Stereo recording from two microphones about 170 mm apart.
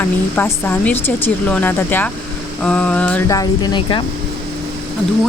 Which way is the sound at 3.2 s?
20° left (ahead or behind).